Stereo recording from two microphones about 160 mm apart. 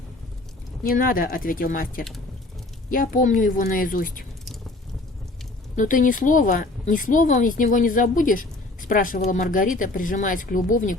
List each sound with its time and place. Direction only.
0.9 s speech: 65° left (ahead or behind)
5.7 s speech: 55° left (ahead or behind)